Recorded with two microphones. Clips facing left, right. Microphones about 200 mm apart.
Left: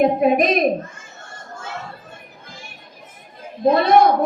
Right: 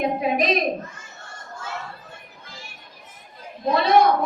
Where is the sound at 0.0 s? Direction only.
50° left (ahead or behind).